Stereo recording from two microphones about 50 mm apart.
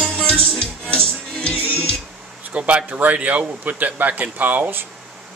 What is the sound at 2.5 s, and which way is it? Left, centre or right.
Speech, right.